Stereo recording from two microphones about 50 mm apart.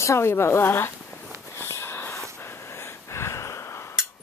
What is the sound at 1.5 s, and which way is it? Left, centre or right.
Wheeze, left.